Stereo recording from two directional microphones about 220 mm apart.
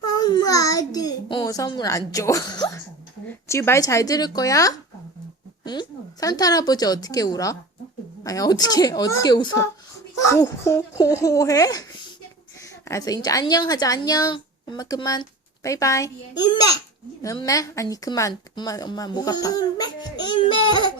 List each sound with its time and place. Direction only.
0.0 s a child's voice: 20° left (ahead or behind)